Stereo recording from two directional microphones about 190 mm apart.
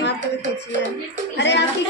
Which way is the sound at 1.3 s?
65° left (ahead or behind).